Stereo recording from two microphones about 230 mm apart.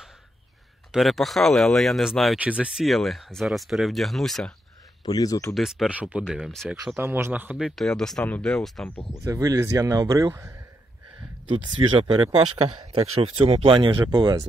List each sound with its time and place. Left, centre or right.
0.9 s speech: centre
5.0 s speech: centre
5.5 s speech: centre
9.2 s a man's voice: centre